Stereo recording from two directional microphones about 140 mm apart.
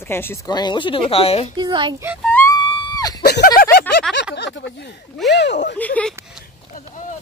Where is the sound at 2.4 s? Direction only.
25° left (ahead or behind).